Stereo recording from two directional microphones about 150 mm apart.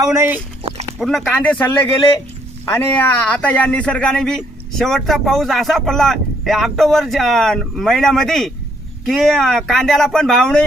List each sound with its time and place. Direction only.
0.0 s speech: 15° right (ahead or behind)
0.9 s speech: centre (ahead or behind)